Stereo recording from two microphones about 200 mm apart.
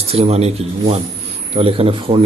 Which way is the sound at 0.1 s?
30° right (ahead or behind).